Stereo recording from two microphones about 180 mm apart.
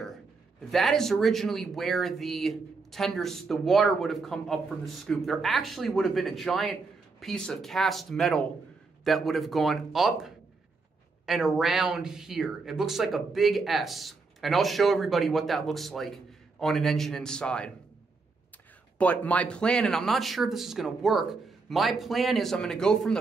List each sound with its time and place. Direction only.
0.7 s speech: centre (ahead or behind)
18.9 s speech: 10° left (ahead or behind)